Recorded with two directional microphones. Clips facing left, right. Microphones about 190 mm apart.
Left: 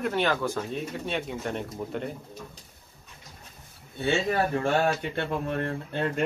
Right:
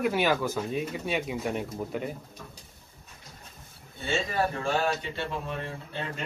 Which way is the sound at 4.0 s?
60° left (ahead or behind).